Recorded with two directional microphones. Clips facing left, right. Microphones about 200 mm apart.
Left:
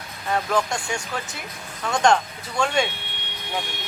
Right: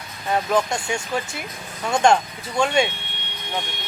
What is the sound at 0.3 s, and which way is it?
Speech, 20° right (ahead or behind).